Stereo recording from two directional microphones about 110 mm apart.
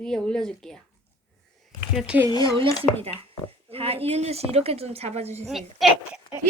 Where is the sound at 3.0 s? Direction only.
60° right (ahead or behind).